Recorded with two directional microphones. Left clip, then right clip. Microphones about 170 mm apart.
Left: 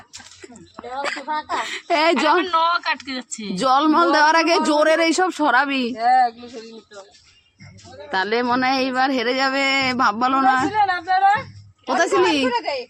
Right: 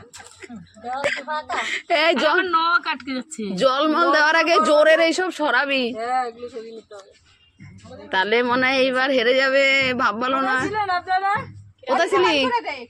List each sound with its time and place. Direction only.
0.9 s speech: 20° left (ahead or behind)
2.4 s speech: 10° left (ahead or behind)
3.5 s speech: 35° left (ahead or behind)
5.9 s speech: 60° left (ahead or behind)
8.1 s speech: 15° left (ahead or behind)
10.7 s speech: 65° left (ahead or behind)
11.9 s speech: 35° left (ahead or behind)